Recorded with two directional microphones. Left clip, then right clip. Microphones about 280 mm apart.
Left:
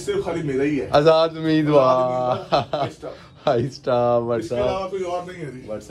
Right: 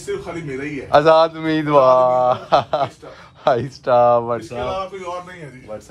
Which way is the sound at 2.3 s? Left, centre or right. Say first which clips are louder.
Right 4 dB; centre.